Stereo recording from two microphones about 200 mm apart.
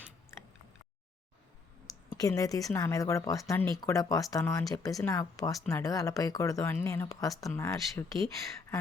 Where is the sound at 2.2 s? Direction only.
15° left (ahead or behind).